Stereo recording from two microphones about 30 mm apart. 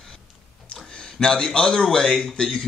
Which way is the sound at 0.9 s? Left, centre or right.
Left.